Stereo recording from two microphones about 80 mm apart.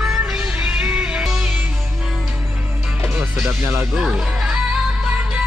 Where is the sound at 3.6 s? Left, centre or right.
Right.